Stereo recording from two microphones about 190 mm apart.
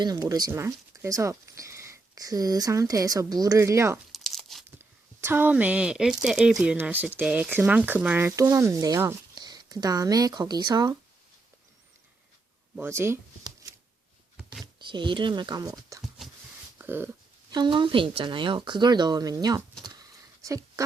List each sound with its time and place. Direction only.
0.0 s speech: 20° right (ahead or behind)
4.1 s crumpling: centre (ahead or behind)
4.8 s speech: 10° right (ahead or behind)
12.7 s speech: 10° right (ahead or behind)
16.7 s a sound: 10° right (ahead or behind)
17.5 s speech: 25° right (ahead or behind)
19.8 s a sound: 20° right (ahead or behind)